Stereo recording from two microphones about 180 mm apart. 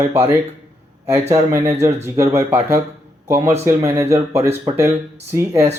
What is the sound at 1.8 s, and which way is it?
Speech, 15° right (ahead or behind).